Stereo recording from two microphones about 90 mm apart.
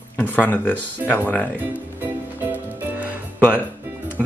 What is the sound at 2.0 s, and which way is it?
Music, 20° right (ahead or behind).